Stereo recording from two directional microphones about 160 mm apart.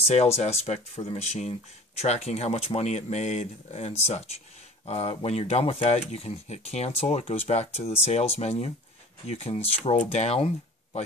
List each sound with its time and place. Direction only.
0.0 s speech: 40° left (ahead or behind)